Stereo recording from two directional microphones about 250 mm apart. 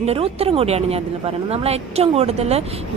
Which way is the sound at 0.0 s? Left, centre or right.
Right.